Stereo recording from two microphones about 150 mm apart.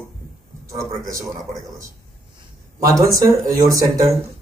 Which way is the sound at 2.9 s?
20° right (ahead or behind).